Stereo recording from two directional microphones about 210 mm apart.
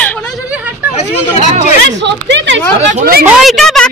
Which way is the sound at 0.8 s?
5° right (ahead or behind).